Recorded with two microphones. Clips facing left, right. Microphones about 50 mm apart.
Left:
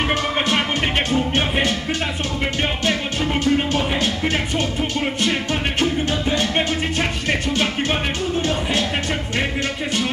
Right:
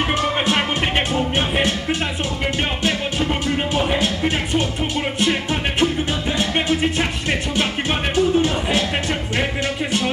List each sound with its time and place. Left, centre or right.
0.1 s music: centre
3.9 s music: centre
8.4 s music: centre